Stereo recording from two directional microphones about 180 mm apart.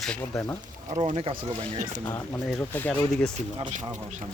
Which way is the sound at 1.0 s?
35° right (ahead or behind).